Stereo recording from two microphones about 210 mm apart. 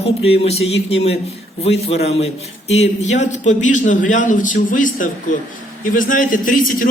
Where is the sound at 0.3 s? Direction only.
30° left (ahead or behind).